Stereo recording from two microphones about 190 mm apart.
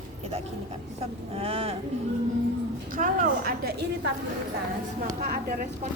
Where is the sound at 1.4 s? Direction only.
30° right (ahead or behind).